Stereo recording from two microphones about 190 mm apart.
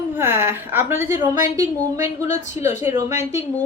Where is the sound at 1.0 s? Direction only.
40° left (ahead or behind).